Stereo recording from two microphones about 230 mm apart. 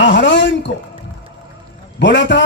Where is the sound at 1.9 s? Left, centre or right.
Left.